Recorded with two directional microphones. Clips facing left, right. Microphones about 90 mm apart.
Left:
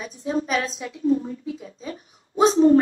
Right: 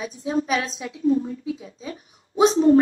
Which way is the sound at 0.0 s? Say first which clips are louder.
Right 1 dB; 40° left (ahead or behind).